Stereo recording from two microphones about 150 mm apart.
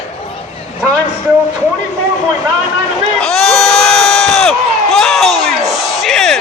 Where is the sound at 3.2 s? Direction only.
5° left (ahead or behind).